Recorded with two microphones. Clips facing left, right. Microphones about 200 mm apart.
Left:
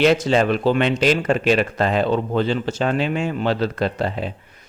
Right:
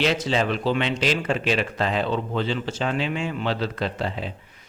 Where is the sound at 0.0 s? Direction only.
50° left (ahead or behind).